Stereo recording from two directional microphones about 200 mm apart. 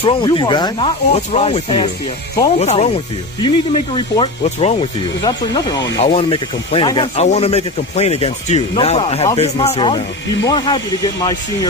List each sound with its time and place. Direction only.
0.0 s speech: 20° left (ahead or behind)